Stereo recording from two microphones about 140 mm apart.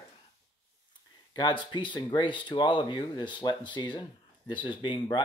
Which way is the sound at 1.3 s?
35° left (ahead or behind).